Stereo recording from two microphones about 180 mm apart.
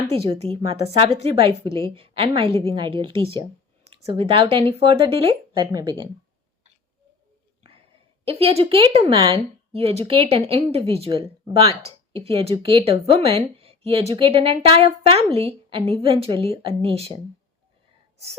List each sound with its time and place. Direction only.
0.3 s a woman's voice: 30° right (ahead or behind)
8.2 s a woman's voice: 35° right (ahead or behind)